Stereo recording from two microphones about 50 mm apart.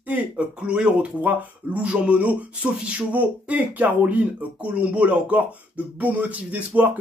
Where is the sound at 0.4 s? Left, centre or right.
Right.